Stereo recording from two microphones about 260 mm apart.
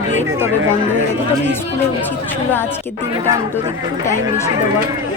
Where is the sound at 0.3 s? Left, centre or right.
Centre.